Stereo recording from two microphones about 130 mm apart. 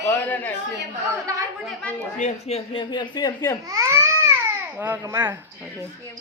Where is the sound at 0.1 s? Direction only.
15° left (ahead or behind).